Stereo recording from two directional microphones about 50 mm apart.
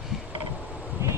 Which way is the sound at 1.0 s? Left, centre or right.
Right.